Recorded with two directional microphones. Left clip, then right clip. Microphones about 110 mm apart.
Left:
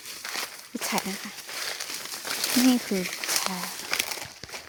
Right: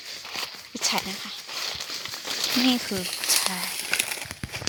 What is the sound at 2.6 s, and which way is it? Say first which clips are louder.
Speech: even; 30° left (ahead or behind).